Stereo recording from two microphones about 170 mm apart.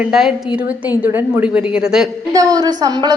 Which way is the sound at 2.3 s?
20° right (ahead or behind).